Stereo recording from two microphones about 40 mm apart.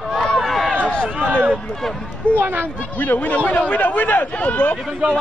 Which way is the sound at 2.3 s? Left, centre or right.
Right.